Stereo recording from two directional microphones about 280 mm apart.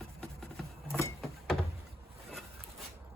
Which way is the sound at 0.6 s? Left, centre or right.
Centre.